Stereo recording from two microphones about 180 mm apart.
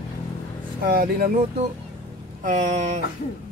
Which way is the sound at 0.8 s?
55° right (ahead or behind).